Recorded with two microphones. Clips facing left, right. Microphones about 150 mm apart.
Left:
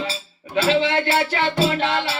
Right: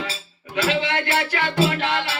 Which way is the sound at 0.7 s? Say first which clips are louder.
Left 5 dB; 30° left (ahead or behind).